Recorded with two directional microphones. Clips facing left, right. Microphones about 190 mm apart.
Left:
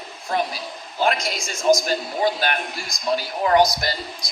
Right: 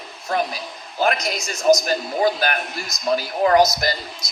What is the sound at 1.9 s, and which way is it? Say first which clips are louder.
Speech: right 2 dB; 45° right (ahead or behind).